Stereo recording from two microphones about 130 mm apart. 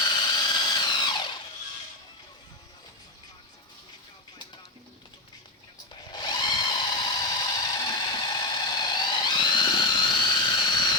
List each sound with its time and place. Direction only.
0.0 s drill: 35° left (ahead or behind)
5.9 s drill: 35° left (ahead or behind)